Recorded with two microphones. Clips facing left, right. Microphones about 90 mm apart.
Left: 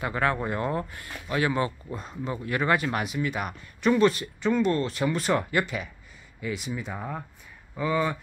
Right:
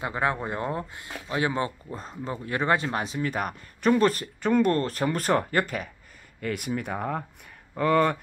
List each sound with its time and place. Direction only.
0.0 s speech: 20° right (ahead or behind)
3.2 s speech: 45° right (ahead or behind)
6.4 s speech: 55° right (ahead or behind)